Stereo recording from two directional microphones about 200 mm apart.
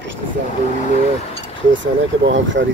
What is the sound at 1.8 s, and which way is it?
Speech, 65° right (ahead or behind).